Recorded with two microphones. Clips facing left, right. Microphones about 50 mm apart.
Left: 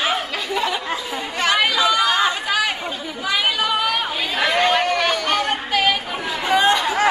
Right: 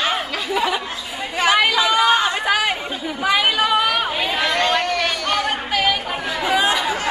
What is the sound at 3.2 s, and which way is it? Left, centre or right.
Chatter, centre.